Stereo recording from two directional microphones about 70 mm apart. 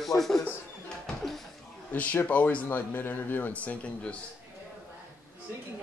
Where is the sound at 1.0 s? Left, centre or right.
Centre.